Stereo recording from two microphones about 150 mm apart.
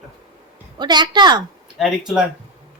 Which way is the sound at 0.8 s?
30° right (ahead or behind).